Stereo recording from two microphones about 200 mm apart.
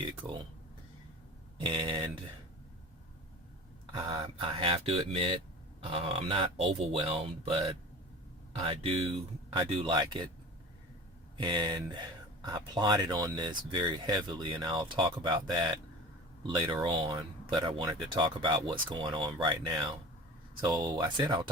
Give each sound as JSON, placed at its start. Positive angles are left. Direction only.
{"t": 1.6, "sound": "speech", "side_deg": -25}
{"t": 3.9, "sound": "speech", "side_deg": -15}
{"t": 4.2, "sound": "speech", "side_deg": -25}
{"t": 8.5, "sound": "speech", "side_deg": -30}
{"t": 11.3, "sound": "speech", "side_deg": -25}
{"t": 16.8, "sound": "speech", "side_deg": -25}